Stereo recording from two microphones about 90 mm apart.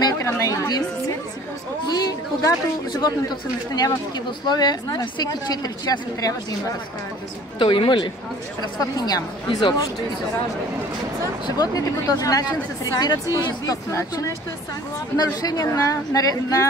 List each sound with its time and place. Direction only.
0.2 s chatter: 35° left (ahead or behind)
1.9 s speech: 50° left (ahead or behind)
7.5 s speech: 70° left (ahead or behind)
8.9 s speech: 45° left (ahead or behind)
11.4 s speech: 45° left (ahead or behind)
13.7 s a woman's voice: 40° left (ahead or behind)